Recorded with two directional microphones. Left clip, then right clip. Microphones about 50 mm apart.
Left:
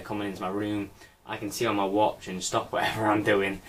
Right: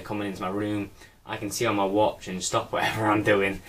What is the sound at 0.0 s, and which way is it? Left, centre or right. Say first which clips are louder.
Speech: right 1 dB; centre.